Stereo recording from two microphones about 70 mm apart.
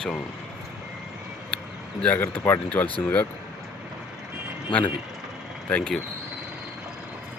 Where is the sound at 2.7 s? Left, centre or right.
Centre.